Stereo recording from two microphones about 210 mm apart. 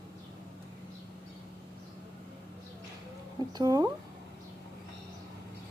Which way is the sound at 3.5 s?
20° right (ahead or behind).